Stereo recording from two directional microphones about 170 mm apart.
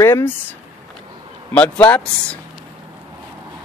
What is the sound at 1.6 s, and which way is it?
Speech, 10° left (ahead or behind).